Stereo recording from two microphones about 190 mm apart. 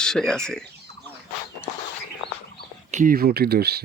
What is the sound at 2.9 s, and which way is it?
Speech, 45° right (ahead or behind).